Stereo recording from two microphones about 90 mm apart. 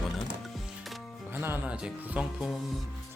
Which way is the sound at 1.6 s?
15° right (ahead or behind).